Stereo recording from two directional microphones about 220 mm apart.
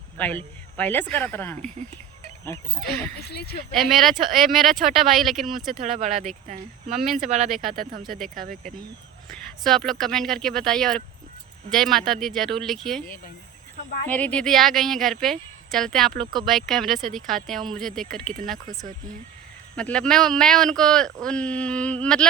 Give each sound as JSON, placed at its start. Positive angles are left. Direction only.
{"t": 0.2, "sound": "speech", "side_deg": 5}
{"t": 2.5, "sound": "speech", "side_deg": -30}
{"t": 3.2, "sound": "speech", "side_deg": 45}
{"t": 3.8, "sound": "speech", "side_deg": 0}
{"t": 5.8, "sound": "speech", "side_deg": -35}
{"t": 9.3, "sound": "speech", "side_deg": 0}
{"t": 14.1, "sound": "speech", "side_deg": 5}
{"t": 19.7, "sound": "speech", "side_deg": 5}